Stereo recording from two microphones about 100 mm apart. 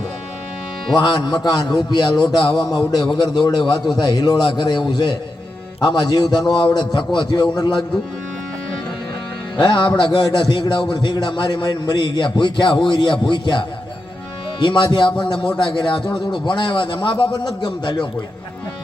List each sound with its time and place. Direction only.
0.9 s a man's voice: 45° left (ahead or behind)
9.6 s a man's voice: 50° left (ahead or behind)